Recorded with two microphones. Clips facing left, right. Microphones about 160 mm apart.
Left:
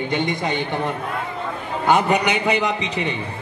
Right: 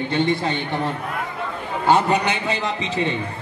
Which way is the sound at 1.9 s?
15° left (ahead or behind).